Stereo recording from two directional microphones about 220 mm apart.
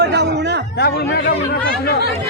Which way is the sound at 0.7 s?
45° left (ahead or behind).